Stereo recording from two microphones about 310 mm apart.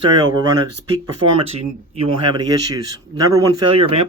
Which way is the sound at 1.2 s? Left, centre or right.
Right.